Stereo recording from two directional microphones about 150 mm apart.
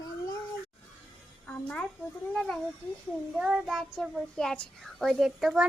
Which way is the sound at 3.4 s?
5° right (ahead or behind).